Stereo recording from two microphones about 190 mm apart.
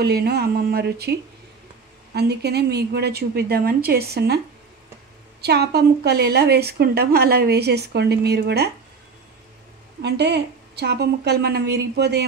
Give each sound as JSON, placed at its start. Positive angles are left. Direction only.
{"t": 0.0, "sound": "a woman's voice", "side_deg": -60}
{"t": 2.1, "sound": "a woman's voice", "side_deg": -60}
{"t": 5.4, "sound": "a woman's voice", "side_deg": -60}
{"t": 10.0, "sound": "a woman's voice", "side_deg": -60}